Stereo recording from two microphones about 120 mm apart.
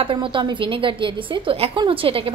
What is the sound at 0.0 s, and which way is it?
A woman's voice, 45° right (ahead or behind).